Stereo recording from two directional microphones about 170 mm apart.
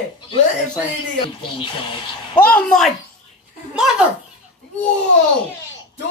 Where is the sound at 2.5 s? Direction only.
5° left (ahead or behind).